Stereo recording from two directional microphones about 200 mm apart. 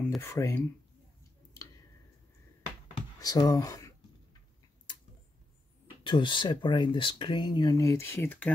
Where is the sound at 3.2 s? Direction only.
20° left (ahead or behind).